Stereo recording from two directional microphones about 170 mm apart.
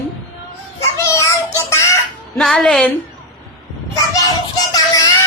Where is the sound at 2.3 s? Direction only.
Centre (ahead or behind).